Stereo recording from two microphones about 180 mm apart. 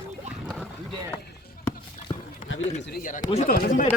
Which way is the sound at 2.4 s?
90° left.